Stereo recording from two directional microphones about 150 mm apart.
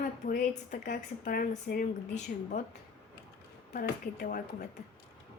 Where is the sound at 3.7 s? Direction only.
80° left.